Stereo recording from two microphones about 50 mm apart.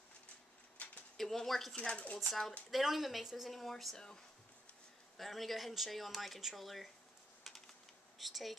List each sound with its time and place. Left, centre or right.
0.8 s a sound: left
1.1 s speech: centre
1.8 s speech: left
2.7 s speech: centre
5.1 s speech: centre
7.5 s typing: centre
8.2 s speech: centre